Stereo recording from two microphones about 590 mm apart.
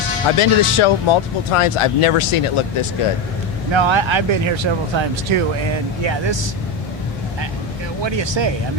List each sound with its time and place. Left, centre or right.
0.3 s speech: left
3.7 s speech: right
8.0 s speech: right